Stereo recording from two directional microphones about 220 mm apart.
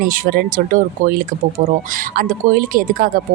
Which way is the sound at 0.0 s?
45° right (ahead or behind).